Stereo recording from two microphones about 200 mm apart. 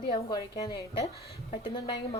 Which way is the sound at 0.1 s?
20° left (ahead or behind).